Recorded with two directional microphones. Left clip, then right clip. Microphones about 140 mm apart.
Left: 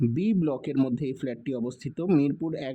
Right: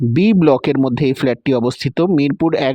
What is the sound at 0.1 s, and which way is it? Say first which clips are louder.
Speech: right 15 dB; 40° right (ahead or behind).